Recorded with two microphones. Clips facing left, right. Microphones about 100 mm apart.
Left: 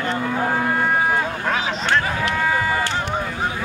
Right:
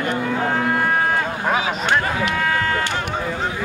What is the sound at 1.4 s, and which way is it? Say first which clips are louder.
Speech: right 2 dB; 10° right (ahead or behind).